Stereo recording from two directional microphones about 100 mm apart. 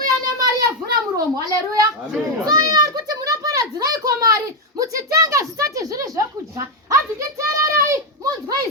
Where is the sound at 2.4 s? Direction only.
40° right (ahead or behind).